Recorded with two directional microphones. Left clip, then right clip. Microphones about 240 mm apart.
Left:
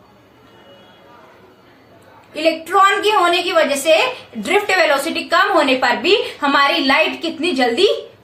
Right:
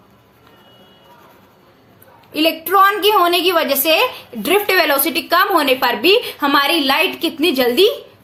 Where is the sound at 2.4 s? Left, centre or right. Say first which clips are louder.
Right 1 dB; right.